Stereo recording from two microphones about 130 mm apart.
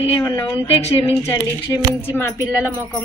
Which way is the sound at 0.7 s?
55° left (ahead or behind).